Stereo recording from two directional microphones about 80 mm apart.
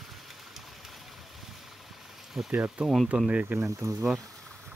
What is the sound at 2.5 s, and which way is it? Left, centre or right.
Speech, centre.